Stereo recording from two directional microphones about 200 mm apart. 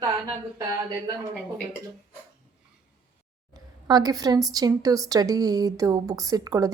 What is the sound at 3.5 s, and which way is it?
A woman's voice, 20° right (ahead or behind).